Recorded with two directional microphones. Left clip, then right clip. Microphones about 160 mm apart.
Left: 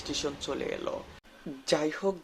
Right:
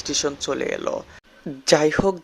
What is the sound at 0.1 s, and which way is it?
Speech, 45° right (ahead or behind).